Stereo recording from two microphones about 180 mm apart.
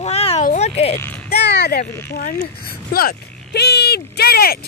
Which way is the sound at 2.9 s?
55° left (ahead or behind).